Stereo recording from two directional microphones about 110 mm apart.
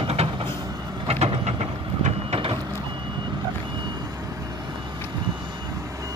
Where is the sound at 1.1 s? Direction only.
65° right (ahead or behind).